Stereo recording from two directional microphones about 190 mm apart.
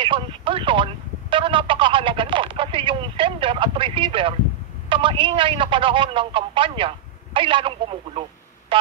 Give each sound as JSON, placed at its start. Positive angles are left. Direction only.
{"t": 0.0, "sound": "a man's voice", "side_deg": -25}
{"t": 1.3, "sound": "telephone", "side_deg": -25}
{"t": 4.8, "sound": "a man's voice", "side_deg": -25}